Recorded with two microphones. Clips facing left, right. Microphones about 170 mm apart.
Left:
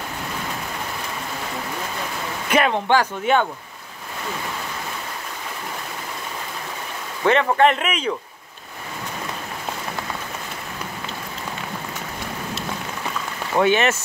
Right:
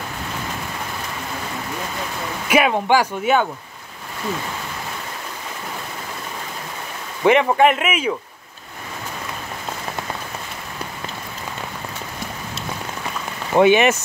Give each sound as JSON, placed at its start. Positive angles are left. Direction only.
{"t": 2.5, "sound": "speech", "side_deg": -10}
{"t": 7.2, "sound": "speech", "side_deg": -10}
{"t": 13.6, "sound": "speech", "side_deg": -15}